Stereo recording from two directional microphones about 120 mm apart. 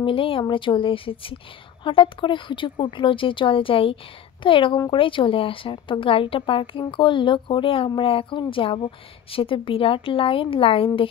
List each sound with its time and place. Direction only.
0.0 s speech: 45° left (ahead or behind)